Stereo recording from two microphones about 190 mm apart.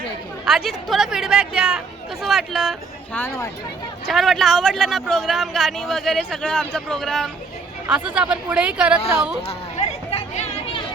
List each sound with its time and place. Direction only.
0.4 s a man's voice: centre (ahead or behind); by 3.5 s 15° left (ahead or behind)
4.1 s a man's voice: centre (ahead or behind)
10.1 s chatter: 30° left (ahead or behind)